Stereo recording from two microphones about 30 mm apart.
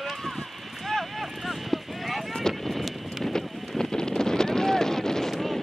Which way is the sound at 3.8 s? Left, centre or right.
Left.